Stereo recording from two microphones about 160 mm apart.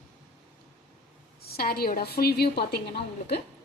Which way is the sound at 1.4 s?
70° left (ahead or behind).